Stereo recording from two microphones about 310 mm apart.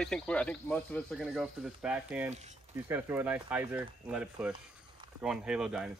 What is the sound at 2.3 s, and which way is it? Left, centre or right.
Speech, right.